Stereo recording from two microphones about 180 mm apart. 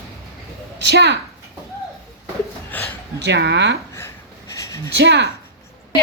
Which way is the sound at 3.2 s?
75° right (ahead or behind).